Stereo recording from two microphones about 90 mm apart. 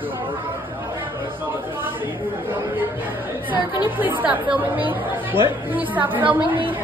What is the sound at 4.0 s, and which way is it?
A woman's voice, 20° right (ahead or behind).